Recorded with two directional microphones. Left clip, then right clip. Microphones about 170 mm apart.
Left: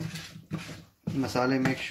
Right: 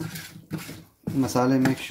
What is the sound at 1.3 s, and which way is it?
Speech, 30° right (ahead or behind).